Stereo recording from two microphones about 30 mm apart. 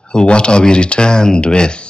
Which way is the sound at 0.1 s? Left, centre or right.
Left.